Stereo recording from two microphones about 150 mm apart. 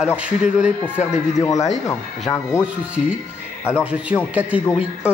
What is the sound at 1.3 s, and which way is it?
Speech, 20° left (ahead or behind).